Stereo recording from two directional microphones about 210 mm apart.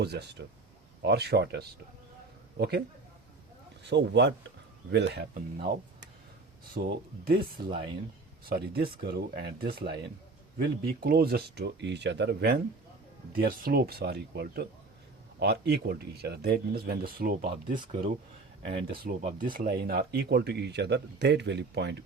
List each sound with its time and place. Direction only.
0.0 s speech: 50° right (ahead or behind)
3.8 s speech: 55° right (ahead or behind)
6.7 s speech: 45° right (ahead or behind)
7.6 s speech: 25° right (ahead or behind)
8.4 s speech: 45° right (ahead or behind)